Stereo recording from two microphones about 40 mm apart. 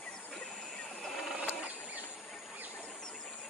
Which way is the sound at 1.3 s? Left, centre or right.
Right.